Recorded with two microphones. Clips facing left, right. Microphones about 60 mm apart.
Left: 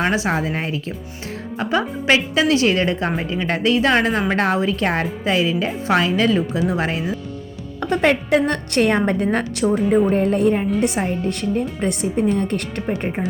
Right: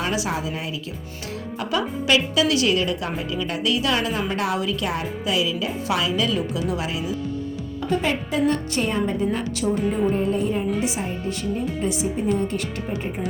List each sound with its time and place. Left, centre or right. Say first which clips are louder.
0.0 s a woman's voice: left 5 dB; left
7.8 s a woman's voice: left 6 dB; left